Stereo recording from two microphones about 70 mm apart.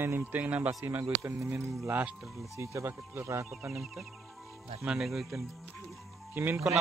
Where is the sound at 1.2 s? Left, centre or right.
Right.